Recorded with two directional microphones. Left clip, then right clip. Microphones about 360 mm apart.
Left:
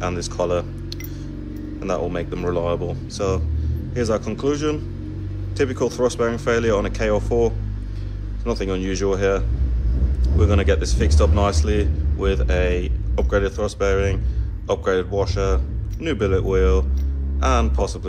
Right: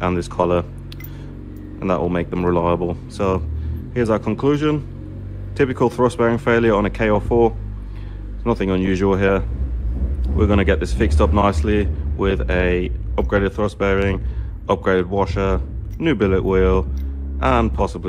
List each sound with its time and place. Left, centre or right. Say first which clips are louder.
0.0 s speech: right 4 dB; centre
1.8 s speech: right 4 dB; centre